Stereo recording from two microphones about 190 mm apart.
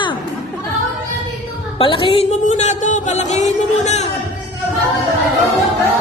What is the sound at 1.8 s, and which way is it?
Music, 25° left (ahead or behind).